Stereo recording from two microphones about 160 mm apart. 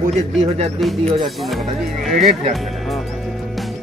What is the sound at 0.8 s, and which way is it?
Speech, centre (ahead or behind).